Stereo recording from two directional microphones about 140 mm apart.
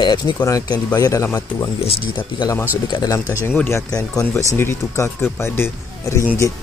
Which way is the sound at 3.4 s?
15° left (ahead or behind).